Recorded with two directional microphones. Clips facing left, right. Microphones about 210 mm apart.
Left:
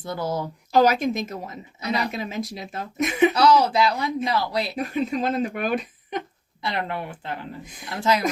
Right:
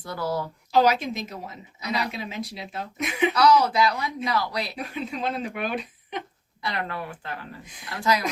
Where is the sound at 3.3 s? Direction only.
25° left (ahead or behind).